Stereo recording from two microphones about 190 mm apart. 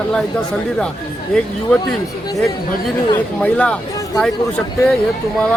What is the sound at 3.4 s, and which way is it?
Speech, 5° left (ahead or behind).